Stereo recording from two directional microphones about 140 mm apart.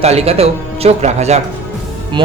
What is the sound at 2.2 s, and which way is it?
Speech, 40° right (ahead or behind).